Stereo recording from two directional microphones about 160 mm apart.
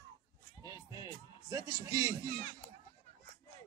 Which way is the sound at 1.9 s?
20° right (ahead or behind).